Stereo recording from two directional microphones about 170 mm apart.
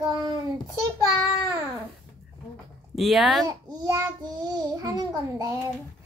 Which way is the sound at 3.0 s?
Centre (ahead or behind).